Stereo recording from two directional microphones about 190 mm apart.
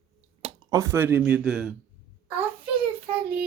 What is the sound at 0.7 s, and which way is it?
Speech, 15° right (ahead or behind).